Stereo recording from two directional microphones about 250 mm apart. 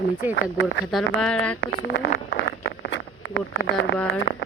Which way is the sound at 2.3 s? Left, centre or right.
Left.